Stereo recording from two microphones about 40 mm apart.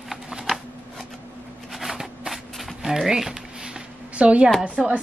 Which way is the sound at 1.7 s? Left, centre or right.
Centre.